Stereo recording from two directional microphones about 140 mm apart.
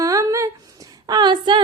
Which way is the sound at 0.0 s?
25° right (ahead or behind).